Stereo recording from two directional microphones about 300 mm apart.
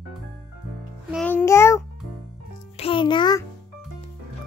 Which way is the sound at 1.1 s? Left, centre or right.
Centre.